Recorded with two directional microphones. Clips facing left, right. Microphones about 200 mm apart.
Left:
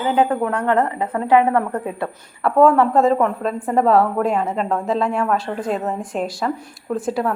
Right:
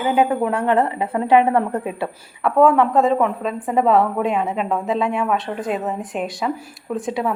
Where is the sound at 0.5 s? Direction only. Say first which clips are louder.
Even; 25° right (ahead or behind).